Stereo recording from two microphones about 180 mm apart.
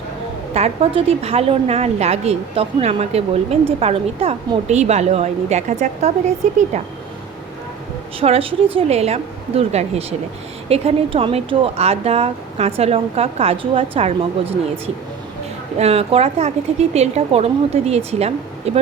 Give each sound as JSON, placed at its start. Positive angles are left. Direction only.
{"t": 0.5, "sound": "a woman's voice", "side_deg": -35}
{"t": 8.2, "sound": "a woman's voice", "side_deg": -30}
{"t": 15.8, "sound": "a woman's voice", "side_deg": -35}